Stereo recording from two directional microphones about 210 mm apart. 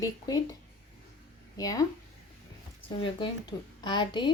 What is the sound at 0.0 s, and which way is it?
Speech, 15° left (ahead or behind).